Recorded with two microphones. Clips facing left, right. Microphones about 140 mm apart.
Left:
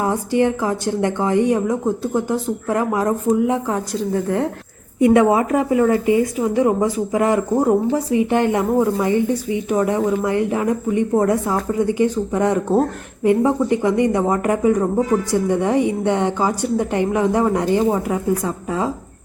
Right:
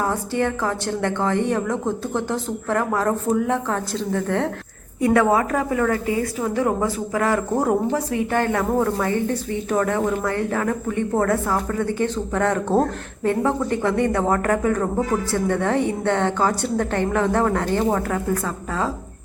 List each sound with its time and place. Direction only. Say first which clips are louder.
0.0 s speech: left 4 dB; 15° left (ahead or behind)
4.9 s a woman's voice: left 4 dB; 20° left (ahead or behind); by 8.0 s 5° left (ahead or behind)
8.3 s speech: left 1 dB; 20° left (ahead or behind)